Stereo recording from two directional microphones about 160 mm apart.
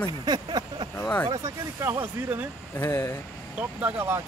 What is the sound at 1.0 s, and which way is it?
Speech, 10° left (ahead or behind).